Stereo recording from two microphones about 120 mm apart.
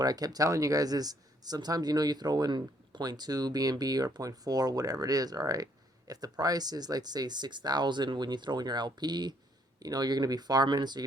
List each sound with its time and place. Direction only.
0.0 s speech: 30° right (ahead or behind)